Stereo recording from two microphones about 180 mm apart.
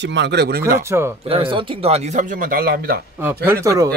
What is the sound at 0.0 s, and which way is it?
Speech, 80° right.